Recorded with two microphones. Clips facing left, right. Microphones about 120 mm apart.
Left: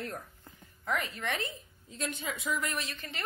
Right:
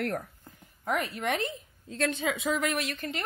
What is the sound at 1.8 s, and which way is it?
A woman's voice, 90° right.